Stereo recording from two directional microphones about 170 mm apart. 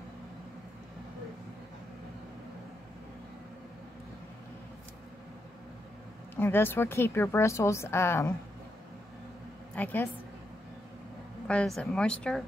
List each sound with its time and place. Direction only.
6.3 s a woman's voice: 15° left (ahead or behind)
9.8 s a woman's voice: 10° left (ahead or behind)
11.4 s speech: 5° left (ahead or behind)